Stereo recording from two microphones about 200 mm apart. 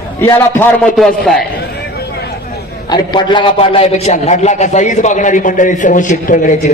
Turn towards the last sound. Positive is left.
turn(degrees=40)  # may be behind; listen again after turning